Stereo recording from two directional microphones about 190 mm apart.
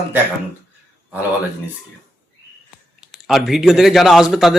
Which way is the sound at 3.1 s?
Centre (ahead or behind).